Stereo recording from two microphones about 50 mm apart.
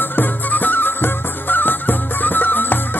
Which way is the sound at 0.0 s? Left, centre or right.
Left.